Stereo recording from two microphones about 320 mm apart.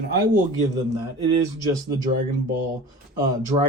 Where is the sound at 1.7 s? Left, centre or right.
Centre.